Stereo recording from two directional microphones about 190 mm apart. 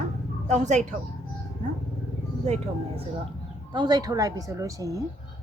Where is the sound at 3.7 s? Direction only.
20° right (ahead or behind).